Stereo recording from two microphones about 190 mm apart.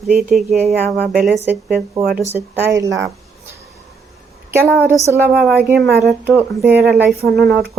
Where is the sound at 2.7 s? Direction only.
15° right (ahead or behind).